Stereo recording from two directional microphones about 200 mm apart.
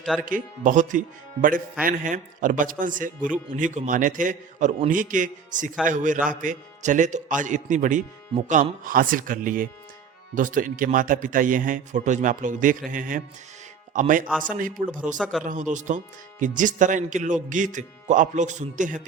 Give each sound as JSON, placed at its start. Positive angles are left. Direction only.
{"t": 0.0, "sound": "speech", "side_deg": 5}
{"t": 0.3, "sound": "speech", "side_deg": -40}
{"t": 15.2, "sound": "speech", "side_deg": 0}
{"t": 15.4, "sound": "speech", "side_deg": -40}